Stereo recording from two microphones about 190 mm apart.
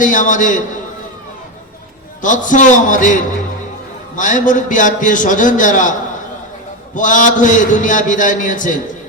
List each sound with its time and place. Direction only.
0.0 s a man's voice: 45° left (ahead or behind)
2.2 s a man's voice: 40° left (ahead or behind)
6.9 s a man's voice: 45° left (ahead or behind)